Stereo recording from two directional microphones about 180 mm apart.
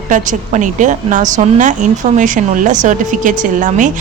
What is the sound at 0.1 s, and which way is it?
Speech, 45° right (ahead or behind).